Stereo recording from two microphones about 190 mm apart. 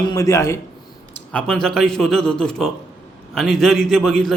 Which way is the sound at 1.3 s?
5° left (ahead or behind).